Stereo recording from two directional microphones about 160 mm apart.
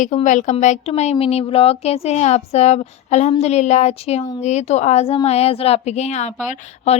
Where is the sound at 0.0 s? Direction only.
50° left (ahead or behind).